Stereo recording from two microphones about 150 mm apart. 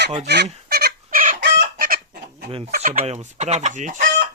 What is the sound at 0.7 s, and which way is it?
Fowl, 90° right.